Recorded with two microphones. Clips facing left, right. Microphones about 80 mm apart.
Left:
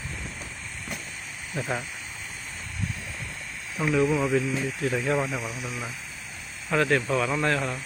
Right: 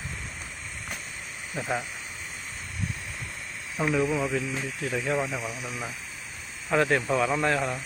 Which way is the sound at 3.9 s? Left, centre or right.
Centre.